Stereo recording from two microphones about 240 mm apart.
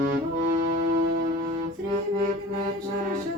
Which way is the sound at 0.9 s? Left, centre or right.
Right.